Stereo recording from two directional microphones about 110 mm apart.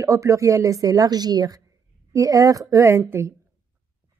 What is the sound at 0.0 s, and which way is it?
A woman's voice, 30° right (ahead or behind).